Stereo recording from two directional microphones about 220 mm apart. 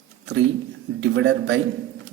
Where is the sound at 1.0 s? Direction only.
55° right (ahead or behind).